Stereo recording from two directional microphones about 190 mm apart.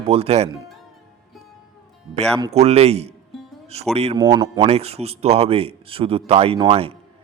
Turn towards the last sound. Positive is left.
turn(degrees=-30)  # may be behind; listen again after turning